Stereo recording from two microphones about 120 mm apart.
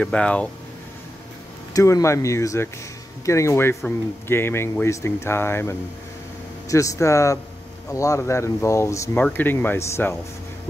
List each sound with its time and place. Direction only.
0.0 s speech: 10° left (ahead or behind)
1.7 s speech: 30° left (ahead or behind)